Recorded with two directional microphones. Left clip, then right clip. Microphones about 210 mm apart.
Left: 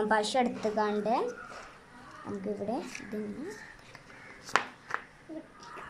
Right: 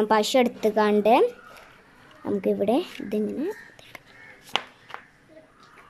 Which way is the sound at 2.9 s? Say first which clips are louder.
Right 10 dB; 45° right (ahead or behind).